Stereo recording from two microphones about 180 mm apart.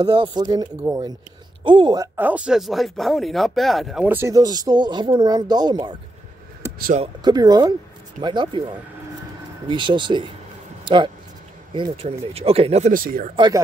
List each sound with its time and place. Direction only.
0.0 s speech: 25° right (ahead or behind)
0.7 s speech: 10° right (ahead or behind)
1.6 s speech: 25° right (ahead or behind)
2.1 s speech: 10° right (ahead or behind); by 5.9 s 25° right (ahead or behind)
7.2 s speech: 20° right (ahead or behind)
11.7 s speech: 30° right (ahead or behind)
12.9 s speech: 50° right (ahead or behind)